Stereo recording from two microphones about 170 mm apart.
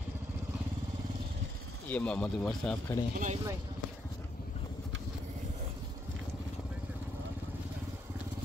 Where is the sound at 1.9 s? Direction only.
5° left (ahead or behind).